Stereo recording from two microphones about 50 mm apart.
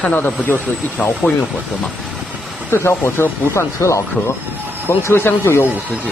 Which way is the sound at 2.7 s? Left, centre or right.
Left.